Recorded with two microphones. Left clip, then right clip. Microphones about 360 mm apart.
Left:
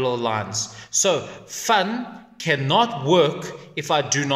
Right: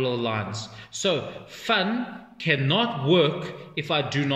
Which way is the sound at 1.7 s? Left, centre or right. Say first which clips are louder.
Left 4 dB; centre.